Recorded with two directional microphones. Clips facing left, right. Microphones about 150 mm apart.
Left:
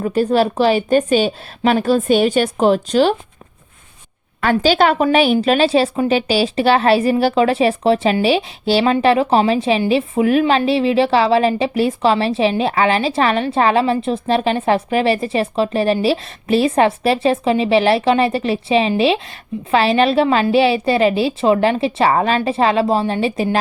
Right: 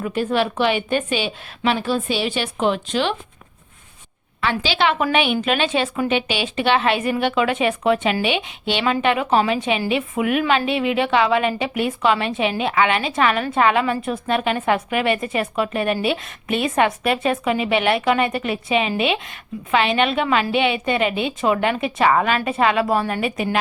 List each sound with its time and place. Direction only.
0.0 s a woman's voice: 35° left (ahead or behind)
4.4 s a woman's voice: 45° left (ahead or behind)